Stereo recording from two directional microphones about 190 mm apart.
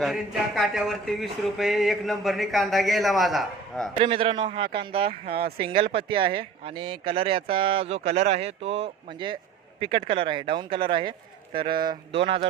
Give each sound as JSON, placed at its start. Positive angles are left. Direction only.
{"t": 0.0, "sound": "speech", "side_deg": 0}
{"t": 3.9, "sound": "speech", "side_deg": -30}
{"t": 5.4, "sound": "speech", "side_deg": -55}
{"t": 5.9, "sound": "speech", "side_deg": -30}